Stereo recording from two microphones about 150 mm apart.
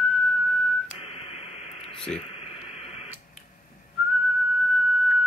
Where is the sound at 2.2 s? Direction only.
40° left (ahead or behind).